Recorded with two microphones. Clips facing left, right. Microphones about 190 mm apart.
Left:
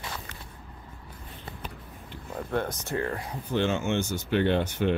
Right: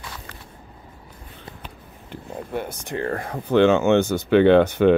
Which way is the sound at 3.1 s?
55° right (ahead or behind).